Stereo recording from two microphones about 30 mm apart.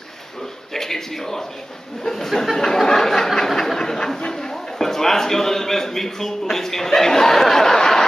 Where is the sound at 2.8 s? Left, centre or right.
Centre.